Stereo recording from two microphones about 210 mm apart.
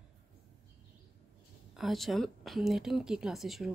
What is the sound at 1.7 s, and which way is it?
Speech, centre (ahead or behind).